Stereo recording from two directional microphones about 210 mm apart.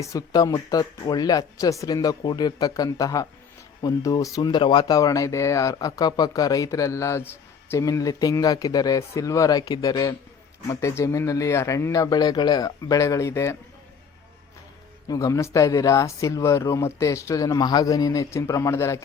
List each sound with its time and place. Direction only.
0.0 s speech: 15° left (ahead or behind)
15.0 s speech: 15° left (ahead or behind)